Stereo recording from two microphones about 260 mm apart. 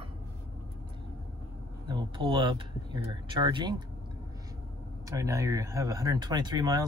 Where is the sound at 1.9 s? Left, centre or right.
Centre.